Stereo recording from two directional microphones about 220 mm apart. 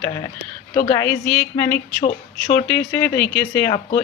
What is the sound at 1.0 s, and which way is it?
Speech, 10° left (ahead or behind).